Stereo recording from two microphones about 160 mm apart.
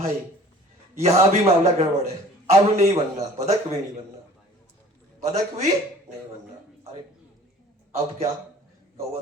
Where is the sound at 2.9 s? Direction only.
40° right (ahead or behind).